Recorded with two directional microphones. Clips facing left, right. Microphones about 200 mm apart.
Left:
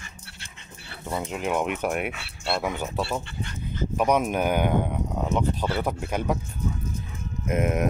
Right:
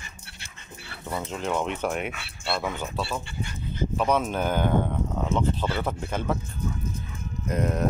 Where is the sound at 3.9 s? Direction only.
15° left (ahead or behind).